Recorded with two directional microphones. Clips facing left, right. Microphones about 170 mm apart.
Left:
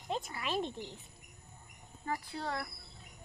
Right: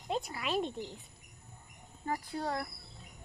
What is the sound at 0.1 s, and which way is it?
Speech, centre (ahead or behind).